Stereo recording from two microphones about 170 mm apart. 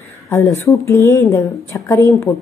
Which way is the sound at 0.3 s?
15° left (ahead or behind).